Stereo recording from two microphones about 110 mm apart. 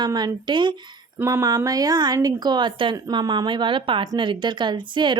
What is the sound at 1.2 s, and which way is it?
A woman's voice, 30° right (ahead or behind).